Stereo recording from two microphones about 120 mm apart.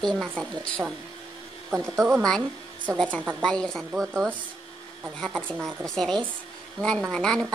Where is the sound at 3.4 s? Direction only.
5° left (ahead or behind).